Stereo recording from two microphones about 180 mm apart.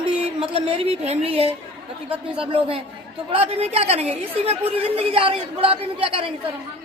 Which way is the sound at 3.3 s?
35° right (ahead or behind).